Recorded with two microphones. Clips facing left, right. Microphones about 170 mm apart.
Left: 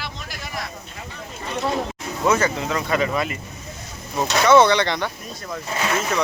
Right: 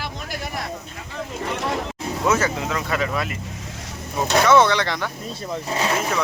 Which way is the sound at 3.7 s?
90° right.